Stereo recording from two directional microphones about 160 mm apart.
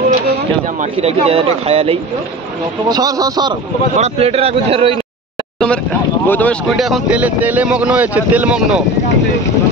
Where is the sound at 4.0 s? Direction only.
40° right (ahead or behind).